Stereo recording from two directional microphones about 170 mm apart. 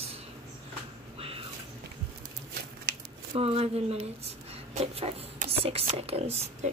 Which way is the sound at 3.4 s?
35° right (ahead or behind).